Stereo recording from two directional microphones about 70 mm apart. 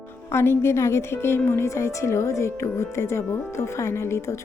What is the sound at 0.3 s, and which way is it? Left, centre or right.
A woman's voice, left.